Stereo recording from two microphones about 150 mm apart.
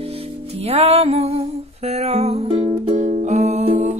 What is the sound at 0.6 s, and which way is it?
Music, 45° right (ahead or behind).